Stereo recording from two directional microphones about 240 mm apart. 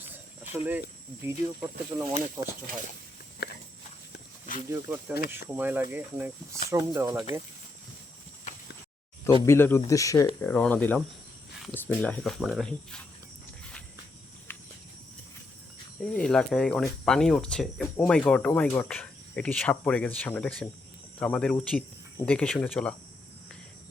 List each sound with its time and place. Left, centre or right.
1.2 s speech: centre
3.4 s a sound: left
4.7 s speech: centre
9.2 s speech: centre
14.5 s a sound: centre
16.0 s speech: centre